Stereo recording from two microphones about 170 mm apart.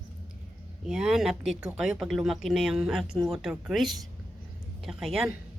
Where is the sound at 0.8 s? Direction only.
5° right (ahead or behind).